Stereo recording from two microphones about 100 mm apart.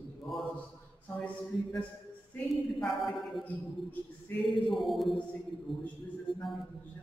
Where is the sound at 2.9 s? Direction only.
Centre (ahead or behind).